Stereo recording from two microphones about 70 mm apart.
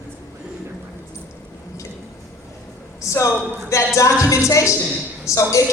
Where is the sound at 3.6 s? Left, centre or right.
Left.